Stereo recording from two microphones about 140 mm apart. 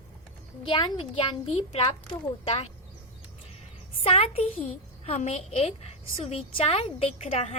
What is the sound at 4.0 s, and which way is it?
A woman's voice, 45° left (ahead or behind).